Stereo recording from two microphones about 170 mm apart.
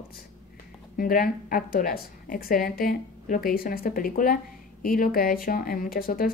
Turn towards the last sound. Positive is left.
turn(degrees=60)  # may be behind; listen again after turning